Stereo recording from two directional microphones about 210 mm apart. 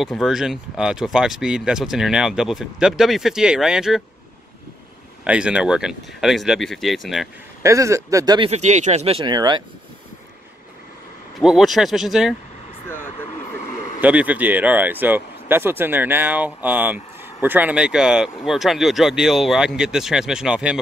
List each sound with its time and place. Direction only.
0.0 s speech: centre (ahead or behind)
5.2 s speech: 5° right (ahead or behind)
7.6 s speech: 15° right (ahead or behind)
8.5 s speech: 35° right (ahead or behind)
11.3 s speech: centre (ahead or behind)
14.0 s speech: 5° right (ahead or behind)